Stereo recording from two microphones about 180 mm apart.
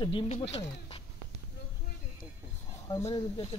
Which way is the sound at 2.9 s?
20° left (ahead or behind).